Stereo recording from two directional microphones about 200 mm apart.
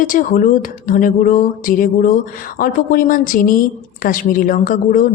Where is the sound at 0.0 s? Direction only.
40° left (ahead or behind).